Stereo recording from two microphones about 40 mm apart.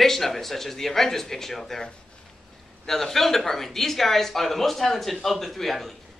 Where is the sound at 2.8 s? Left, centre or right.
Centre.